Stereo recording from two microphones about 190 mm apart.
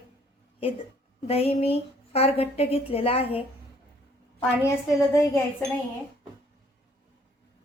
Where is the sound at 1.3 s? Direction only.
30° left (ahead or behind).